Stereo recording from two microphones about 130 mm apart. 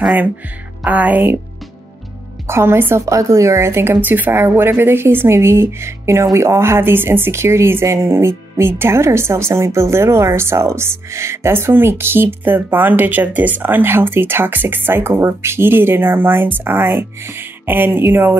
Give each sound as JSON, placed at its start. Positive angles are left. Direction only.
{"t": 0.0, "sound": "a woman's voice", "side_deg": -10}
{"t": 2.4, "sound": "a woman's voice", "side_deg": -20}